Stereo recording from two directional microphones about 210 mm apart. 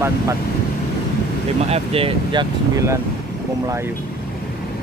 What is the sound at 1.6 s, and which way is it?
Speech, 30° right (ahead or behind).